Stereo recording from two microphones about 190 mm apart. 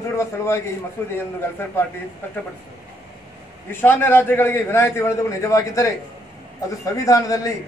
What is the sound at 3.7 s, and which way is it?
A man's voice, 10° left (ahead or behind).